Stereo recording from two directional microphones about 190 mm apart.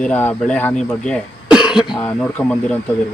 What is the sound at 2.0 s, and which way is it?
Speech, 10° left (ahead or behind).